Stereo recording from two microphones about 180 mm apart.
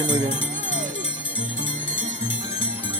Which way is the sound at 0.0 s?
25° right (ahead or behind).